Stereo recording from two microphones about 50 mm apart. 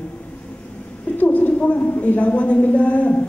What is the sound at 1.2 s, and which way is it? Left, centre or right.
A man's voice, left.